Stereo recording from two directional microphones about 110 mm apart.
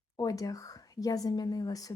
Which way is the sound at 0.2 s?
35° left (ahead or behind).